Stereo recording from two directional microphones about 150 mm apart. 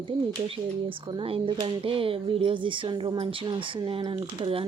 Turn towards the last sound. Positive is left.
turn(degrees=-35)  # may be behind; listen again after turning